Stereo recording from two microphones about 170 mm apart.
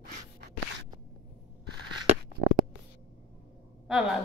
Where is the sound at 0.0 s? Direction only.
70° right (ahead or behind).